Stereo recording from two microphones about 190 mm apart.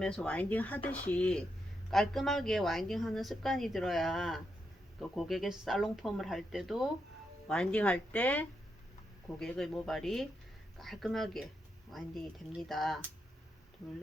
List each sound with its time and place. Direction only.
0.0 s speech: 5° left (ahead or behind)